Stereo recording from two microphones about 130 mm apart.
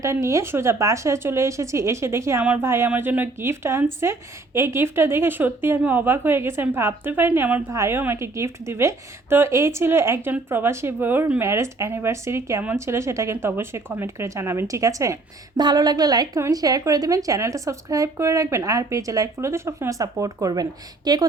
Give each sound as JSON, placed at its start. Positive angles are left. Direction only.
{"t": 0.0, "sound": "speech", "side_deg": -25}
{"t": 2.4, "sound": "a woman's voice", "side_deg": -10}